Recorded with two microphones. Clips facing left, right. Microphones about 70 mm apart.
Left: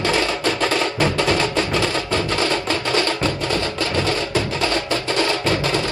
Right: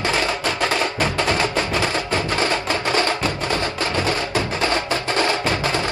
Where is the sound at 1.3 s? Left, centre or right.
Right.